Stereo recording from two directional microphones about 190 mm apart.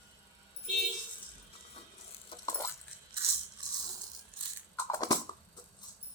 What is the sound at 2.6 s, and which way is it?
Coin, 15° left (ahead or behind).